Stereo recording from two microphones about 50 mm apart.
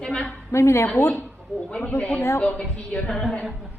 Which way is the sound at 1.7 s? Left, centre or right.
Left.